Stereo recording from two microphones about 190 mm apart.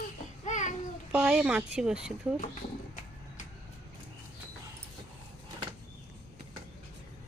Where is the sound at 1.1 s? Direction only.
5° right (ahead or behind).